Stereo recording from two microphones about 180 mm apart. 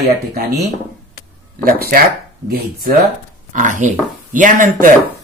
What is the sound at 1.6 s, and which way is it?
Speech, 55° right (ahead or behind).